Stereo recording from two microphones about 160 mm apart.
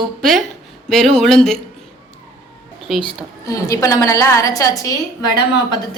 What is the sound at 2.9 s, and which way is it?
Speech, centre (ahead or behind).